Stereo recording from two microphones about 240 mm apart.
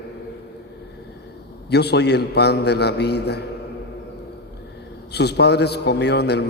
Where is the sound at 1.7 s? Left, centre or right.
Left.